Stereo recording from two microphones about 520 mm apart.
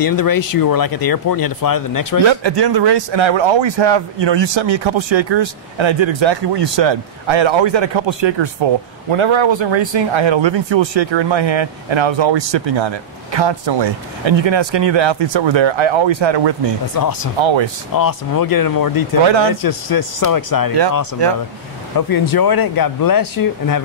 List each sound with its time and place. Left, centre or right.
0.0 s speech: left
2.2 s speech: right
16.9 s speech: left
17.4 s speech: right
17.9 s speech: left
19.2 s speech: right
19.6 s speech: left
21.9 s speech: left